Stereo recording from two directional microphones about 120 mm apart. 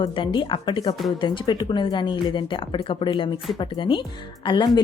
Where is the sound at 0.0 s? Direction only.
40° left (ahead or behind).